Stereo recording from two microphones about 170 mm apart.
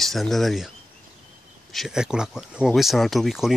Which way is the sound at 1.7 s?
Centre (ahead or behind).